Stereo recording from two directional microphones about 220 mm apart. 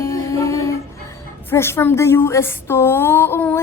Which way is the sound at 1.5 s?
10° left (ahead or behind).